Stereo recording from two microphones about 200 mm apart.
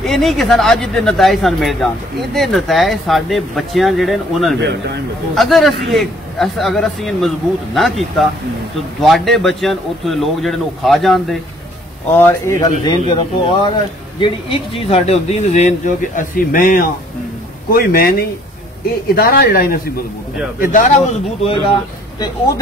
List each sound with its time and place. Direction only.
0.0 s a man's voice: centre (ahead or behind)
4.6 s a man's voice: 55° right (ahead or behind)
5.3 s a man's voice: centre (ahead or behind)
12.1 s speech: 10° left (ahead or behind)
14.2 s speech: 30° left (ahead or behind); by 18.1 s 50° left (ahead or behind)
19.1 s speech: 50° left (ahead or behind)
20.7 s speech: 30° left (ahead or behind)